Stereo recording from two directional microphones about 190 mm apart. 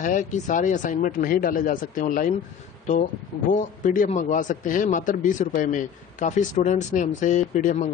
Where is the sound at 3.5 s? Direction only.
45° left (ahead or behind).